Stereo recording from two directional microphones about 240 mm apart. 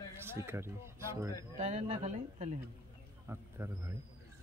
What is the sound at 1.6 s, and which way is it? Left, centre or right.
Speech, right.